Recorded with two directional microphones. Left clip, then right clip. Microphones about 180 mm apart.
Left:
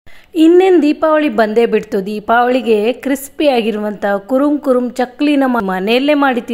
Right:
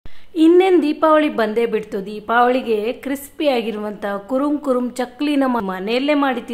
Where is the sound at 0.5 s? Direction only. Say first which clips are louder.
Left 4 dB; 20° left (ahead or behind).